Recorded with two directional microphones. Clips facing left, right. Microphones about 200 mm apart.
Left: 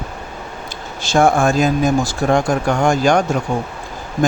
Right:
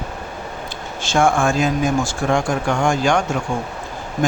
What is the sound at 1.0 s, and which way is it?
Speech, 35° left (ahead or behind).